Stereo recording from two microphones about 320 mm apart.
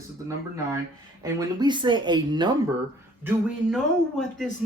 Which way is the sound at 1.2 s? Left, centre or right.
Centre.